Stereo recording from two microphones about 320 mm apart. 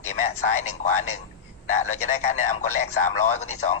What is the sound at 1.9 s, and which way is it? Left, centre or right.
Speech, left.